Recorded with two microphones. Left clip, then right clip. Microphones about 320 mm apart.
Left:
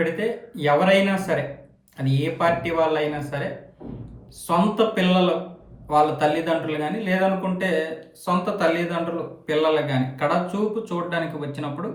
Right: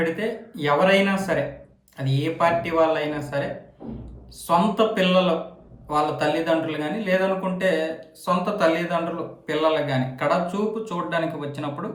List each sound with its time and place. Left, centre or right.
0.0 s a man's voice: centre
4.4 s a man's voice: centre